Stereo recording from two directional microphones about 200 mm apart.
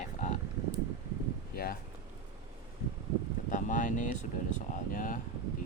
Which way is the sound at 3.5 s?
40° left (ahead or behind).